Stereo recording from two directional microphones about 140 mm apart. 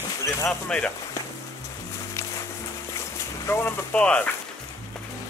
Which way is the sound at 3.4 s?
15° left (ahead or behind).